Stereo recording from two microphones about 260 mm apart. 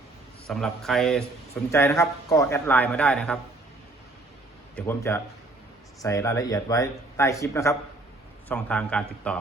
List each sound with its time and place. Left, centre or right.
0.4 s a man's voice: centre
4.7 s a man's voice: centre